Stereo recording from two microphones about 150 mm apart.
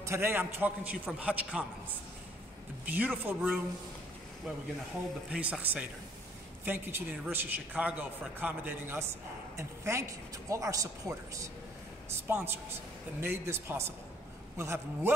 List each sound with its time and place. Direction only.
0.0 s a man's voice: 15° right (ahead or behind)
2.8 s a man's voice: 10° right (ahead or behind)
5.3 s a man's voice: 10° right (ahead or behind)